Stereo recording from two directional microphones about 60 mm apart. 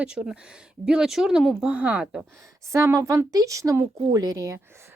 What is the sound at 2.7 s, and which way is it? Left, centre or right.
Speech, right.